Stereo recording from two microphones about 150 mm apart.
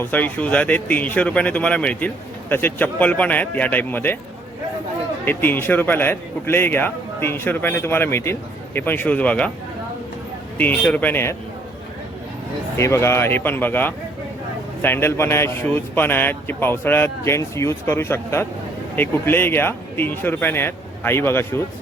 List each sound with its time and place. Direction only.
0.0 s a man's voice: 10° left (ahead or behind)
5.2 s a man's voice: 15° left (ahead or behind)
10.6 s a man's voice: 10° left (ahead or behind)
12.7 s a man's voice: 15° left (ahead or behind)